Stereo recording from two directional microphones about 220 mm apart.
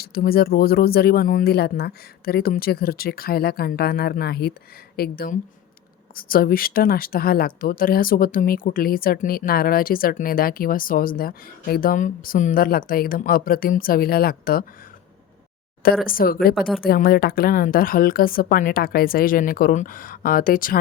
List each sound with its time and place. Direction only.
0.0 s speech: 45° left (ahead or behind)
16.0 s speech: 40° left (ahead or behind)
16.6 s speech: centre (ahead or behind)
16.8 s speech: 40° left (ahead or behind)